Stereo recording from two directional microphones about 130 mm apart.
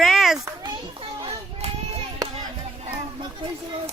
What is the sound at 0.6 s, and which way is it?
Children playing, 40° right (ahead or behind).